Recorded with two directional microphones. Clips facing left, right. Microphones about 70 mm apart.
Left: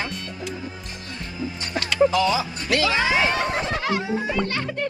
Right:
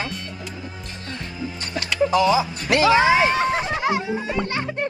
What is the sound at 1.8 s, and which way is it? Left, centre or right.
Music, right.